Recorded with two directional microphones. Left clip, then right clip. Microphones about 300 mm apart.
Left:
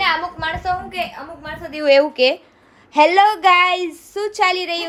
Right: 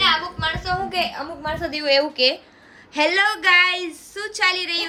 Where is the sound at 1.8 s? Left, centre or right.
Centre.